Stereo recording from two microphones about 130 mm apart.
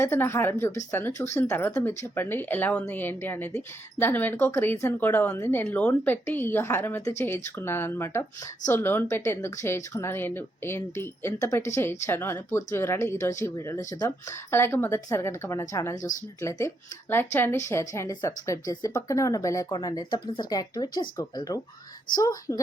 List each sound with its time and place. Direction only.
0.0 s speech: 20° left (ahead or behind)